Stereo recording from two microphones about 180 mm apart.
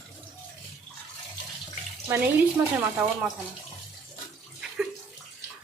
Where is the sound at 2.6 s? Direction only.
15° right (ahead or behind).